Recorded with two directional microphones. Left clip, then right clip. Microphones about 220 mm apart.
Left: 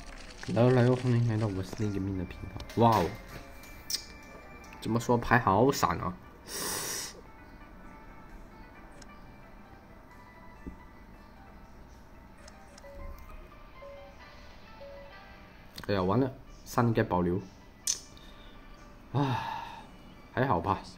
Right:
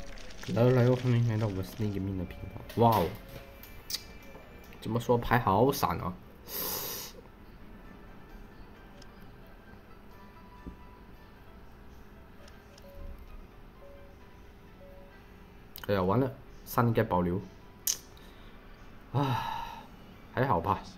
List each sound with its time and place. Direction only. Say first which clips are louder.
0.0 s a sound: left 1 dB; 5° right (ahead or behind)
0.8 s speech: even; 5° right (ahead or behind)
4.9 s speech: left 1 dB; 10° left (ahead or behind)
6.5 s wheeze: left 3 dB; centre (ahead or behind)
15.8 s speech: even; centre (ahead or behind)
19.1 s gasp: even; 5° left (ahead or behind)
20.3 s speech: even; 5° left (ahead or behind)